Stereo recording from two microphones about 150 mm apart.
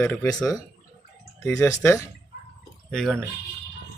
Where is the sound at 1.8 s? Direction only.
20° left (ahead or behind).